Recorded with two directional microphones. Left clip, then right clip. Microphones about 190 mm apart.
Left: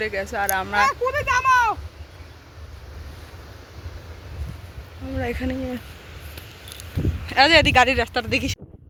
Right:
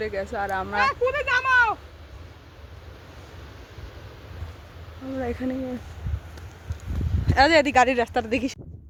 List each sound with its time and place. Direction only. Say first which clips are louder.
0.0 s speech: left 3 dB; centre (ahead or behind)
0.9 s a sound: left 1 dB; 60° left (ahead or behind)
5.1 s speech: left 2 dB; centre (ahead or behind)
7.3 s speech: left 3 dB; 15° right (ahead or behind)